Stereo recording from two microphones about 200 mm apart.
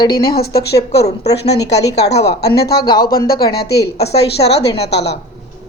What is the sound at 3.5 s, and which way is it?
A woman's voice, 55° left (ahead or behind).